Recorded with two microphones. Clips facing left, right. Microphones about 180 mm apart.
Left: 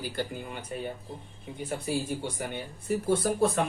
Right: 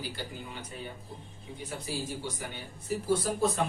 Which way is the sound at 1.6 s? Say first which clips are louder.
Left 6 dB; 55° left (ahead or behind).